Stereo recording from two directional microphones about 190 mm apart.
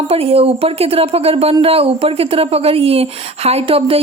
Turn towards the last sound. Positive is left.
turn(degrees=-30)  # may be behind; listen again after turning